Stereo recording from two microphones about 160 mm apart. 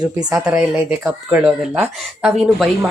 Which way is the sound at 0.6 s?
5° right (ahead or behind).